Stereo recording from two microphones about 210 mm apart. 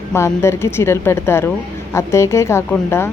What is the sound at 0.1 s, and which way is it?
Speech, 10° left (ahead or behind).